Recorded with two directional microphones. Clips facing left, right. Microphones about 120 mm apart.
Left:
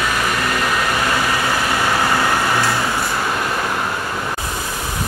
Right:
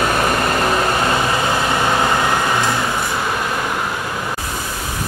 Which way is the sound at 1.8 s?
20° right (ahead or behind).